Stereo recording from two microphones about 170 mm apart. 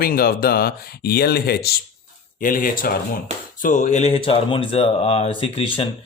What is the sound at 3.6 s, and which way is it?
A man's voice, 45° left (ahead or behind).